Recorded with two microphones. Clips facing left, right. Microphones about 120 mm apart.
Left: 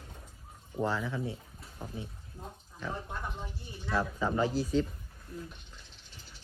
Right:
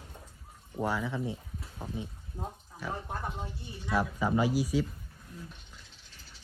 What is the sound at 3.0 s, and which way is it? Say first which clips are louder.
Speech: right 3 dB; 30° right (ahead or behind).